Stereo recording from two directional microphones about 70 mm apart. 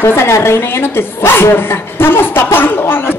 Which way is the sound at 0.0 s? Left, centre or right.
Left.